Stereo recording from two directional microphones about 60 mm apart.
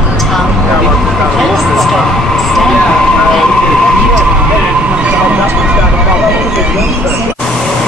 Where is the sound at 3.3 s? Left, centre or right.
Centre.